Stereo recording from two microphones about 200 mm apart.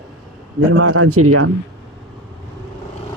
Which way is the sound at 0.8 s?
90° right.